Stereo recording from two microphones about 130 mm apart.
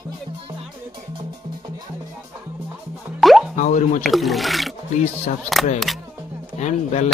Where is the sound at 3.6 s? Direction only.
75° left (ahead or behind).